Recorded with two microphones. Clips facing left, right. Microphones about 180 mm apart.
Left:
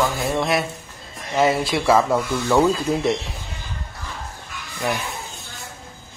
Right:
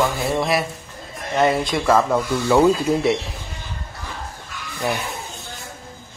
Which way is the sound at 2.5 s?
10° right (ahead or behind).